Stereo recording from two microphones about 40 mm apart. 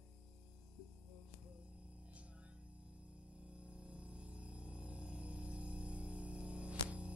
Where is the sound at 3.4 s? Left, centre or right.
Right.